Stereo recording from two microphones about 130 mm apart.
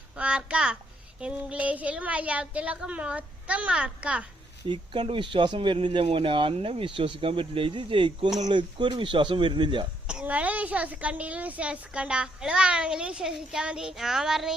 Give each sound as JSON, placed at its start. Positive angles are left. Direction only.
{"t": 0.2, "sound": "a woman's voice", "side_deg": -10}
{"t": 4.7, "sound": "speech", "side_deg": -35}
{"t": 10.1, "sound": "a woman's voice", "side_deg": -10}